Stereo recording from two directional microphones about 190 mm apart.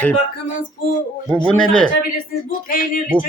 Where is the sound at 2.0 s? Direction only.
50° left (ahead or behind).